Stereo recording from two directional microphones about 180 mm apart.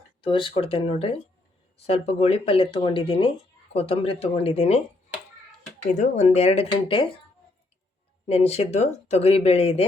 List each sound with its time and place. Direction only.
0.2 s speech: 30° left (ahead or behind)
5.9 s speech: 40° left (ahead or behind)
8.3 s speech: 35° left (ahead or behind)